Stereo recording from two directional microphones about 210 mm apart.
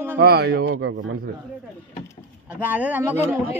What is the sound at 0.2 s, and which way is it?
Speech, 50° right (ahead or behind).